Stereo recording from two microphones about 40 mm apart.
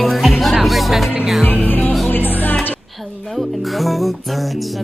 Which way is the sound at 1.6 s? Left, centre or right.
Left.